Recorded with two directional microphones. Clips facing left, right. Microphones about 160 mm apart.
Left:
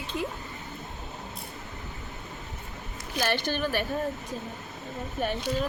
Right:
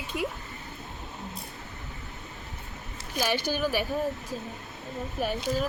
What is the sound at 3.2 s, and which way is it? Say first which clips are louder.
Speech: even; 10° right (ahead or behind).